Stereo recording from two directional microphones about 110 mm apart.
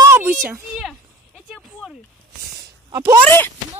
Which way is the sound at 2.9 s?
30° right (ahead or behind).